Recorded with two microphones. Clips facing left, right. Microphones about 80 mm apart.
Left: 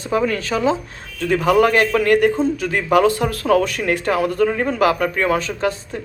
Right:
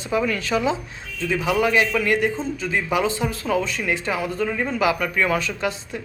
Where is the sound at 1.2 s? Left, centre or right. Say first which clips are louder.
Left 6 dB; left.